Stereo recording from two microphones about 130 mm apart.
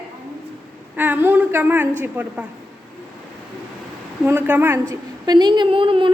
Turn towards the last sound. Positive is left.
turn(degrees=-40)  # may be behind; listen again after turning